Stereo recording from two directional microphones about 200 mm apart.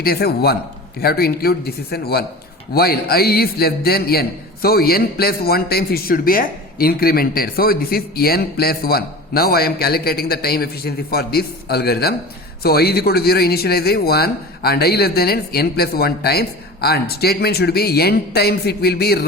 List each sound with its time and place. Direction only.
0.0 s a man's voice: 50° left (ahead or behind)